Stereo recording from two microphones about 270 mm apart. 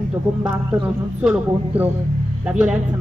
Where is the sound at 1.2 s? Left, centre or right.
Centre.